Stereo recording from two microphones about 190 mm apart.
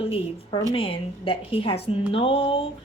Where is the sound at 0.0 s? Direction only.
30° left (ahead or behind).